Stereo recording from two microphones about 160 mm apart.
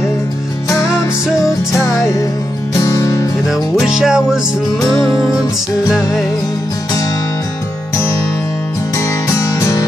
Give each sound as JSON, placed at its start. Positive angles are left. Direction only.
{"t": 2.8, "sound": "music", "side_deg": 20}
{"t": 3.4, "sound": "music", "side_deg": -5}
{"t": 8.9, "sound": "music", "side_deg": 20}